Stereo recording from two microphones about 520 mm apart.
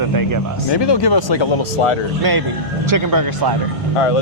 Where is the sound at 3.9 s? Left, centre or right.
Left.